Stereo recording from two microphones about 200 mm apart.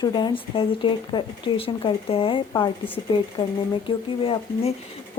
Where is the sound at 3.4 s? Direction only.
35° left (ahead or behind).